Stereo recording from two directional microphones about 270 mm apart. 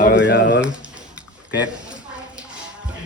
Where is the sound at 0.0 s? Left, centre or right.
Left.